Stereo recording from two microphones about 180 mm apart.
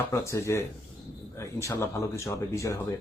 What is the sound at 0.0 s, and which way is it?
Speech, 15° left (ahead or behind).